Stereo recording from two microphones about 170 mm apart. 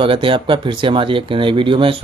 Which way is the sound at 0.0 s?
30° right (ahead or behind).